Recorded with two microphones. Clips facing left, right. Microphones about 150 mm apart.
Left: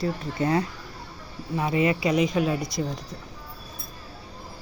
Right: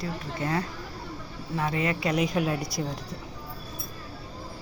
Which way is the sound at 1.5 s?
15° left (ahead or behind).